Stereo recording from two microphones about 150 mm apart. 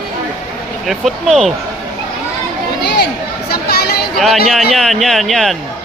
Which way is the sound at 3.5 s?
90° left.